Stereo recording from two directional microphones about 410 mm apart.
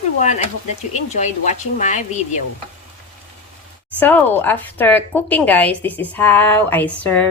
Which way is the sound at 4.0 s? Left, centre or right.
Centre.